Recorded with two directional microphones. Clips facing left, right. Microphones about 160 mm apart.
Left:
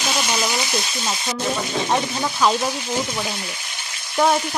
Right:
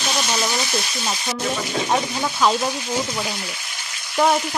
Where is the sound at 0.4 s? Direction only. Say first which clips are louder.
Even; 15° left (ahead or behind).